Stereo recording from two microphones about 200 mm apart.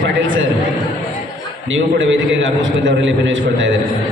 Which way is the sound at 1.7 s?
70° right (ahead or behind).